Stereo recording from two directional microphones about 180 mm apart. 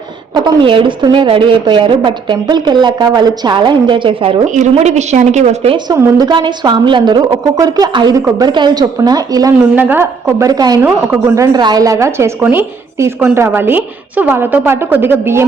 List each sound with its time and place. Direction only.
0.3 s a woman's voice: 25° right (ahead or behind)
4.5 s a woman's voice: 40° right (ahead or behind)
5.7 s a woman's voice: 20° right (ahead or behind)
10.8 s a woman's voice: 10° right (ahead or behind)
11.5 s a woman's voice: 20° right (ahead or behind)